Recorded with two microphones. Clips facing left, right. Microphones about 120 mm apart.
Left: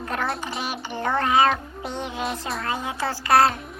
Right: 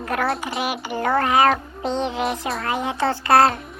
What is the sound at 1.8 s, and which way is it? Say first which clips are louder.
Music: right 6 dB; 20° right (ahead or behind).